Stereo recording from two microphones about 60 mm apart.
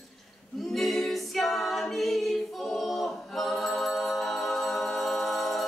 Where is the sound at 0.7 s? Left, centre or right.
Centre.